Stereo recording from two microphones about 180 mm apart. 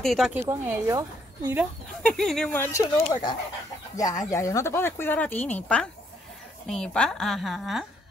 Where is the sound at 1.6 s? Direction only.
5° left (ahead or behind).